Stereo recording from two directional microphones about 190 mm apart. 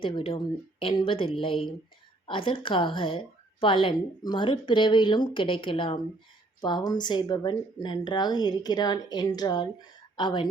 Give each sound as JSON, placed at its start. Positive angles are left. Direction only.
{"t": 0.0, "sound": "a woman's voice", "side_deg": 30}